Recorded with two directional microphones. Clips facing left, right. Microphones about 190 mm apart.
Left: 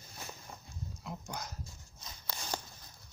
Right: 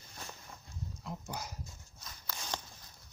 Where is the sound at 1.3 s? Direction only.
10° right (ahead or behind).